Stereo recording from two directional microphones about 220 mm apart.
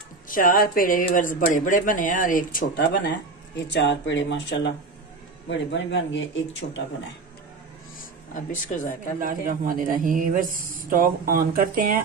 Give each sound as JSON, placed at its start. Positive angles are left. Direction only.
{"t": 0.3, "sound": "speech", "side_deg": 40}
{"t": 8.0, "sound": "speech", "side_deg": 35}
{"t": 9.2, "sound": "a man's voice", "side_deg": -40}